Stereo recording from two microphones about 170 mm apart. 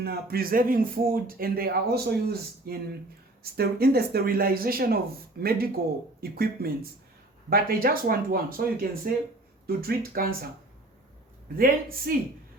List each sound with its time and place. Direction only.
0.0 s a man's voice: 65° right (ahead or behind)
11.5 s a man's voice: 60° right (ahead or behind)